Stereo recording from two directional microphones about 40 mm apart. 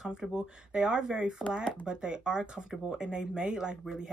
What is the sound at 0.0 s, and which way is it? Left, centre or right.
A woman's voice, centre.